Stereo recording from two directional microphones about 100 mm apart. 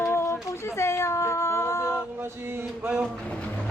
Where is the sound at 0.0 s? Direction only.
25° left (ahead or behind).